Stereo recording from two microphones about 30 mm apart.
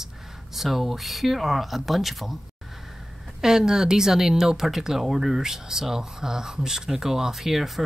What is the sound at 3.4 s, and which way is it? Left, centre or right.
Speech, centre.